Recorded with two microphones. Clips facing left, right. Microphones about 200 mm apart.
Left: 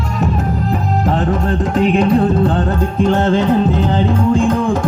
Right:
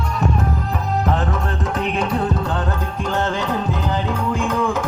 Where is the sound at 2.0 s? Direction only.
30° left (ahead or behind).